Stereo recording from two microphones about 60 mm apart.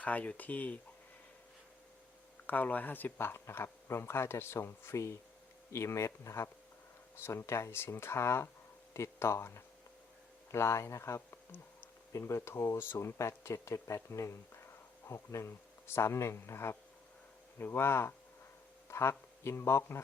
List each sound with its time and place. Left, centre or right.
0.0 s speech: left
2.5 s speech: left